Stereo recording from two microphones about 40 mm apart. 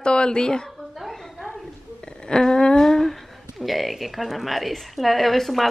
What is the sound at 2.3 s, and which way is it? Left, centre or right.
Humming, centre.